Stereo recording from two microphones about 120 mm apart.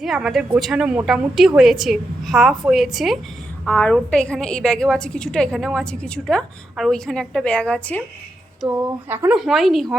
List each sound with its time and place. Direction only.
0.0 s a woman's voice: centre (ahead or behind)
3.7 s a woman's voice: 10° left (ahead or behind)
8.7 s speech: 20° right (ahead or behind)
9.3 s a woman's voice: centre (ahead or behind)